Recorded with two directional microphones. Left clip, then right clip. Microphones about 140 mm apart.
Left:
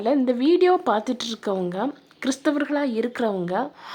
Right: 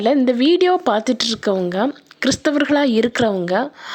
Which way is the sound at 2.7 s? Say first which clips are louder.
Right 8 dB; 40° right (ahead or behind).